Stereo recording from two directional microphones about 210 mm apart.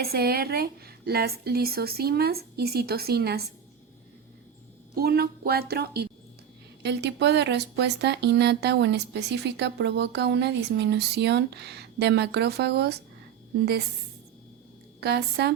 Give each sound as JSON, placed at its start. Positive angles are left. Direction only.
{"t": 0.0, "sound": "speech", "side_deg": -50}
{"t": 4.9, "sound": "speech", "side_deg": -45}
{"t": 15.0, "sound": "speech", "side_deg": -50}